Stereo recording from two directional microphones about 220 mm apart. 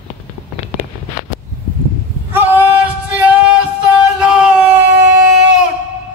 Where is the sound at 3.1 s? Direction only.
5° right (ahead or behind).